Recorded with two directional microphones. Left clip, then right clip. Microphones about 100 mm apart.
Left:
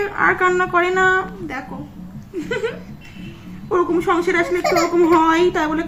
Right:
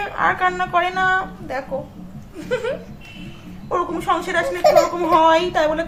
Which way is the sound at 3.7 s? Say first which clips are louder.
Left 3 dB; 30° right (ahead or behind).